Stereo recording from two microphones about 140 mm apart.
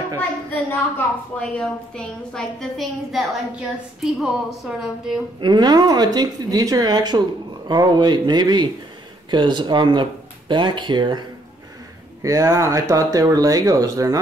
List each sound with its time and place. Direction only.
0.7 s a woman's voice: 10° left (ahead or behind)
5.4 s speech: 30° right (ahead or behind)
12.2 s speech: 25° right (ahead or behind)